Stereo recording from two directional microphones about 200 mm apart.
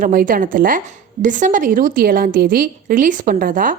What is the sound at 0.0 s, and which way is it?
A woman's voice, 45° right (ahead or behind).